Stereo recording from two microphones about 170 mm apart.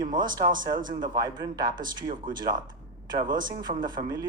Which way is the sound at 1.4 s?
25° right (ahead or behind).